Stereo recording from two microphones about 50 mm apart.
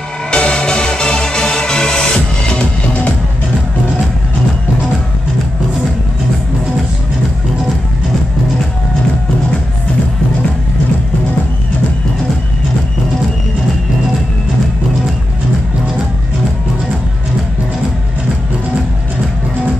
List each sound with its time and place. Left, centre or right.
0.3 s music: centre